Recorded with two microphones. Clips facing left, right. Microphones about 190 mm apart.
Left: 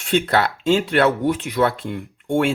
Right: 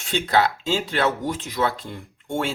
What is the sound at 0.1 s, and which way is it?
Speech, 60° left (ahead or behind).